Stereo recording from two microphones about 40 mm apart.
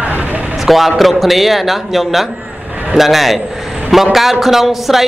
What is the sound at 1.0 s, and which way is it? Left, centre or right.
A man's voice, centre.